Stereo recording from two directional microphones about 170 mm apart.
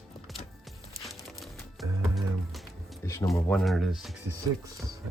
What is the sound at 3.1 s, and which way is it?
Speech, 20° left (ahead or behind).